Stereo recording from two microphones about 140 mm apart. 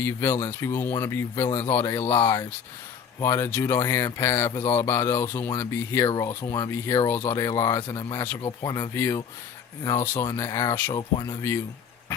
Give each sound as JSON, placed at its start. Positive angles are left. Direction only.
{"t": 0.0, "sound": "speech", "side_deg": 15}
{"t": 2.2, "sound": "speech", "side_deg": 30}
{"t": 3.2, "sound": "speech", "side_deg": 20}
{"t": 10.2, "sound": "speech", "side_deg": 20}
{"t": 10.9, "sound": "speech", "side_deg": 30}